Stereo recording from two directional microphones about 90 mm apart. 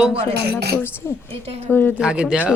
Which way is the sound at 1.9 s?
10° right (ahead or behind).